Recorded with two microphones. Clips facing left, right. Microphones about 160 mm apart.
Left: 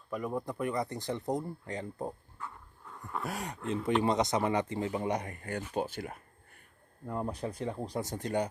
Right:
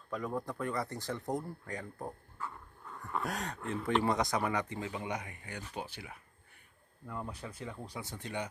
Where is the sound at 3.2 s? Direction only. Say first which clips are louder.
Left 1 dB; 10° left (ahead or behind).